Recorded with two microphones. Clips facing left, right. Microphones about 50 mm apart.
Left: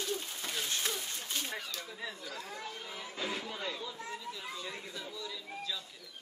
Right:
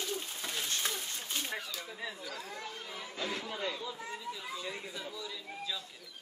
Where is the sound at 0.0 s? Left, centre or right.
Centre.